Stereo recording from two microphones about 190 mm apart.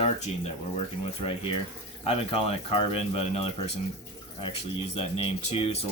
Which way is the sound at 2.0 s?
30° left (ahead or behind).